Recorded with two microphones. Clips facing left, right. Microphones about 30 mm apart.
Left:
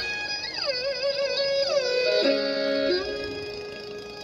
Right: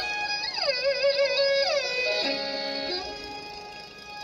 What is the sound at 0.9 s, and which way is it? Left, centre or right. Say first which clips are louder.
Music: right 5 dB; right.